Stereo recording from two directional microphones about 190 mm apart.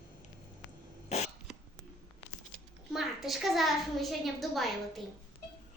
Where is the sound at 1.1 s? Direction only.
35° left (ahead or behind).